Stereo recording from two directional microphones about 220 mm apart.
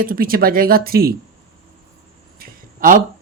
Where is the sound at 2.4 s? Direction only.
40° right (ahead or behind).